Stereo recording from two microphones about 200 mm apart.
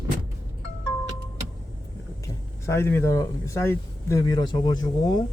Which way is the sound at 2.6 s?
15° left (ahead or behind).